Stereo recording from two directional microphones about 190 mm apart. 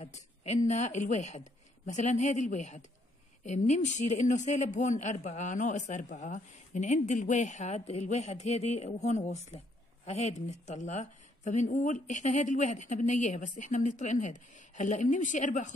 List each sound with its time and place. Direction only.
0.0 s a woman's voice: 35° left (ahead or behind)